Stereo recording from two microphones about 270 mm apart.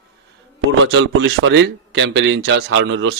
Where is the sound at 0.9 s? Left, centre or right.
Right.